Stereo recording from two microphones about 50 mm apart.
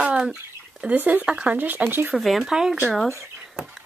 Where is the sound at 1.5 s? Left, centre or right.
Right.